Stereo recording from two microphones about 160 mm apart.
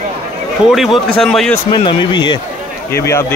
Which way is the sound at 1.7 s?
30° left (ahead or behind).